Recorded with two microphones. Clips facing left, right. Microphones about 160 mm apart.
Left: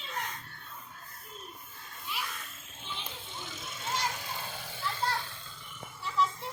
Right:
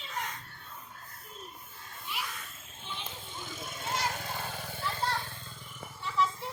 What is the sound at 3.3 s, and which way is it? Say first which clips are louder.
Vehicle: right 3 dB; 50° right (ahead or behind).